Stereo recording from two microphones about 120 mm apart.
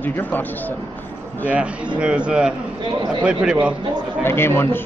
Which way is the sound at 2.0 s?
10° right (ahead or behind).